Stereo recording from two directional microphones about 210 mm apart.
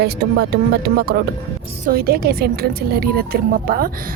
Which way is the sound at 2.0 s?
45° right (ahead or behind).